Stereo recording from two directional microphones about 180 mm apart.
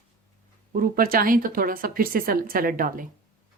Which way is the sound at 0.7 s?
55° right (ahead or behind).